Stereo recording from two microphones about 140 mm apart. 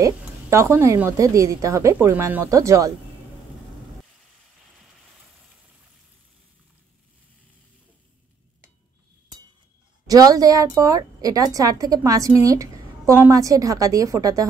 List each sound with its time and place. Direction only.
0.0 s a woman's voice: 20° right (ahead or behind)
10.0 s a woman's voice: 25° right (ahead or behind)